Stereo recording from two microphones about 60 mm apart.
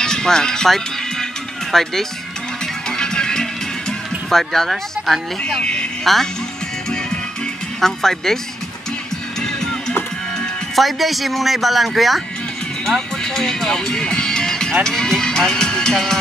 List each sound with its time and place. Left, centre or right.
0.0 s speech: centre
2.9 s music: centre
4.3 s speech: centre
5.6 s speech: centre
6.1 s speech: centre
7.8 s speech: centre
10.8 s speech: centre